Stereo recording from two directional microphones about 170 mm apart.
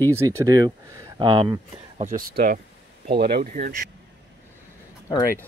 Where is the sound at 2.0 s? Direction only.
45° right (ahead or behind).